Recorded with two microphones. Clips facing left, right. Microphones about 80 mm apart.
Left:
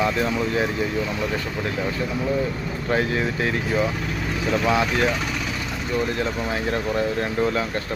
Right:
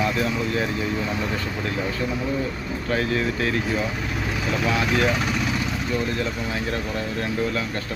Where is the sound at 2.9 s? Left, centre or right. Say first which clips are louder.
Left 1 dB; left.